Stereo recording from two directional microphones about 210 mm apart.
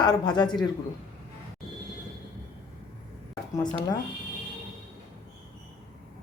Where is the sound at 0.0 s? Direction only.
20° left (ahead or behind).